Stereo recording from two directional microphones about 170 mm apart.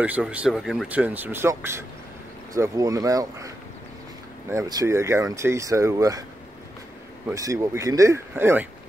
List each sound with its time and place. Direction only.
0.0 s speech: 10° right (ahead or behind)
7.2 s speech: 20° right (ahead or behind)